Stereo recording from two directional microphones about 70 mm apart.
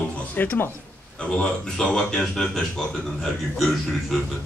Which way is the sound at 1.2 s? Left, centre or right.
Centre.